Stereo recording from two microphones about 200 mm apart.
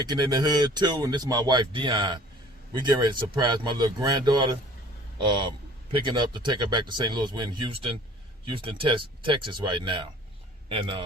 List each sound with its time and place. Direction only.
0.0 s a man's voice: 20° right (ahead or behind)